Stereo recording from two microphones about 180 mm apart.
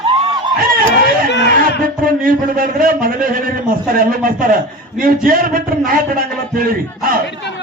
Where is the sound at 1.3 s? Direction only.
70° left (ahead or behind).